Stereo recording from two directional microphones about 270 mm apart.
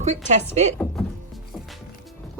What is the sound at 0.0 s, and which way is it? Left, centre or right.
Speech, right.